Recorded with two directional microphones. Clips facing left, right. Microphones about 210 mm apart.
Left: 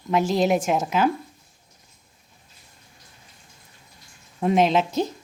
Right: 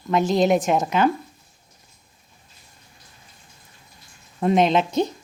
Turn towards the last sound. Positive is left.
turn(degrees=5)  # may be behind; listen again after turning